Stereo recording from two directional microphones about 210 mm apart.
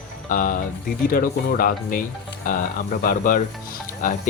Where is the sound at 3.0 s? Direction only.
40° left (ahead or behind).